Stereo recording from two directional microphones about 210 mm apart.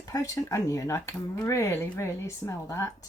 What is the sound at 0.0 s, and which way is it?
Speech, 15° left (ahead or behind).